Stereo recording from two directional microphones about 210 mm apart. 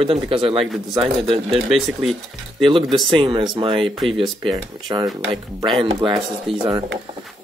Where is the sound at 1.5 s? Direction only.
Centre (ahead or behind).